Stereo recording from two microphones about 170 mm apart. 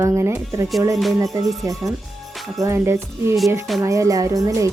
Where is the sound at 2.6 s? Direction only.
15° right (ahead or behind).